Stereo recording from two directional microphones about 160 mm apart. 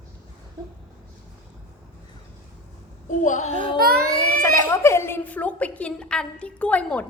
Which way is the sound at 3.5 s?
60° right (ahead or behind).